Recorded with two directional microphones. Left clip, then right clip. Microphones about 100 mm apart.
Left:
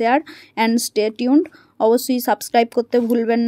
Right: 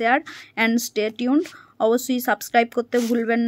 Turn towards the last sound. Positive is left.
turn(degrees=35)  # may be behind; listen again after turning